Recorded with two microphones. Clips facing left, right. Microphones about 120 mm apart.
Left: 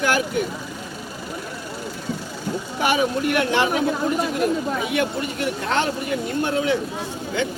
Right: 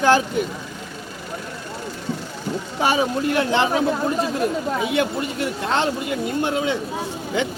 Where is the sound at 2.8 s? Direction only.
30° right (ahead or behind).